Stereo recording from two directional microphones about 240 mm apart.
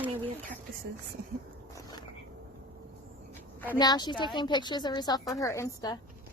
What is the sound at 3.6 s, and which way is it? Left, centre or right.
A woman's voice, centre.